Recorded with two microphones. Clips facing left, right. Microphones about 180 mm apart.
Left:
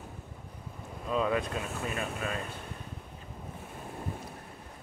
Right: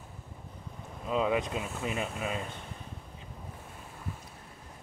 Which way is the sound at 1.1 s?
15° right (ahead or behind).